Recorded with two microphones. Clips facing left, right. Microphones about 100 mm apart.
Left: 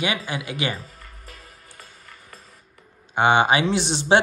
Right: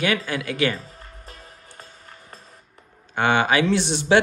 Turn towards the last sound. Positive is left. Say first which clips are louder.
# even
turn(degrees=25)  # may be behind; listen again after turning